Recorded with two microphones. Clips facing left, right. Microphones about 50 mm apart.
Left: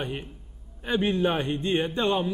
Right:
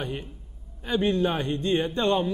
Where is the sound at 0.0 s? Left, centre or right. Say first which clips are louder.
Even; centre.